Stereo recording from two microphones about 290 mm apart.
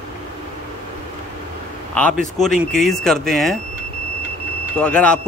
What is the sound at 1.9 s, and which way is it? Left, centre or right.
Speech, centre.